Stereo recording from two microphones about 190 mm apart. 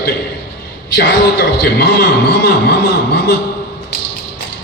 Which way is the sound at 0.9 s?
60° left (ahead or behind).